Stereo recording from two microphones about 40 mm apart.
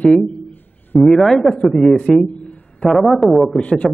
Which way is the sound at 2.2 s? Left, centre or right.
Left.